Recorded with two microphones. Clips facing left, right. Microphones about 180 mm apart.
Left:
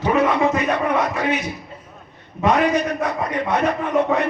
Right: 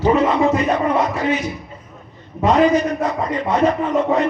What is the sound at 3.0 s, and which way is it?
A man's voice, 65° left (ahead or behind).